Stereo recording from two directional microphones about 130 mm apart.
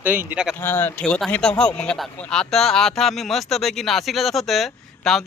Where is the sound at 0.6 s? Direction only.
15° left (ahead or behind).